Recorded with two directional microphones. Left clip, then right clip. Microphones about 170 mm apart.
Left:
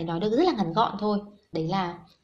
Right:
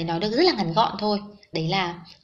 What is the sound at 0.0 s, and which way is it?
Speech, 25° left (ahead or behind).